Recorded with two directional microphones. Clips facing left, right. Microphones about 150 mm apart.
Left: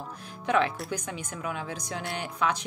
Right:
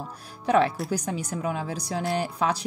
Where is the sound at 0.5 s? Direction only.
35° right (ahead or behind).